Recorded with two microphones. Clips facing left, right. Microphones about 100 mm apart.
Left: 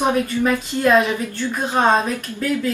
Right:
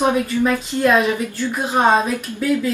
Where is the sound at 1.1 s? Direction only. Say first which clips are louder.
Right 1 dB; 15° right (ahead or behind).